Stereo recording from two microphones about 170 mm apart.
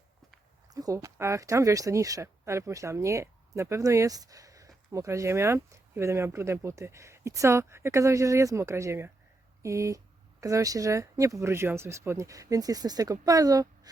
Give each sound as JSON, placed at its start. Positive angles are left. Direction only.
{"t": 0.7, "sound": "speech", "side_deg": -20}